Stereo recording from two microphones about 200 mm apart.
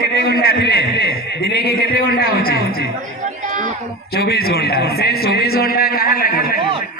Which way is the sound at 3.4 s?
40° right (ahead or behind).